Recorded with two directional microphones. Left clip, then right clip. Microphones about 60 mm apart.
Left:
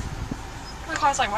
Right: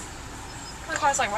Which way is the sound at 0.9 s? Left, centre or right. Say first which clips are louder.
Left 2 dB; centre.